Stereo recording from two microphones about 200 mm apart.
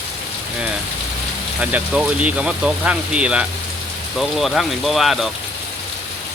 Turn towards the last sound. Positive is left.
turn(degrees=0)  # may be behind; listen again after turning